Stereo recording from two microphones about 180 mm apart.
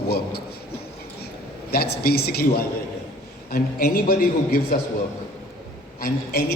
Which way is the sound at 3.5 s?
55° left (ahead or behind).